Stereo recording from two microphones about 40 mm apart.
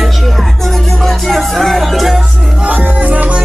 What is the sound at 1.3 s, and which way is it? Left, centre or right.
Music, centre.